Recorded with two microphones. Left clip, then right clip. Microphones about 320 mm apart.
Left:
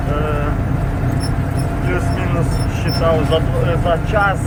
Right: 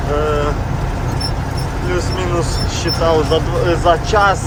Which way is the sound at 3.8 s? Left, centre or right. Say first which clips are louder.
Right 4 dB; centre.